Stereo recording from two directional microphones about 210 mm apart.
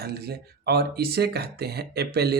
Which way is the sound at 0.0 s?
50° right (ahead or behind).